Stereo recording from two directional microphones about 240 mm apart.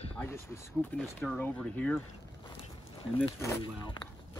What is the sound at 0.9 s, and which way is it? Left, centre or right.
Speech, centre.